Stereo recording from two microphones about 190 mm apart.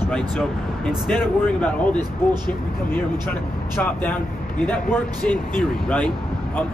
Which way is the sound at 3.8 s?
10° left (ahead or behind).